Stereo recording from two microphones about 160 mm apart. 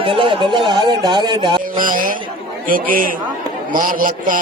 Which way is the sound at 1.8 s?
60° right (ahead or behind).